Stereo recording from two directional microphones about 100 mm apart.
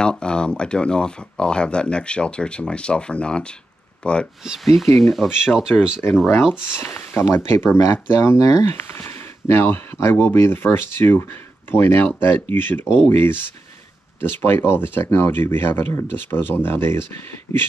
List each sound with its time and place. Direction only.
0.0 s speech: 10° left (ahead or behind)
4.5 s speech: centre (ahead or behind)
6.8 s speech: 20° left (ahead or behind)
17.5 s a sound: 30° left (ahead or behind)